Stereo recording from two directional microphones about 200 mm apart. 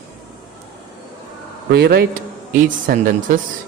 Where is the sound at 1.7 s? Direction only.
55° right (ahead or behind).